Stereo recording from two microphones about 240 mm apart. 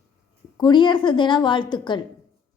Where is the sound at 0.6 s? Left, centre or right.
Centre.